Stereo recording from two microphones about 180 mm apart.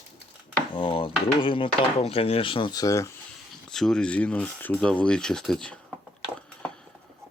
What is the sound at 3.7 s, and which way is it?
Speech, 5° left (ahead or behind).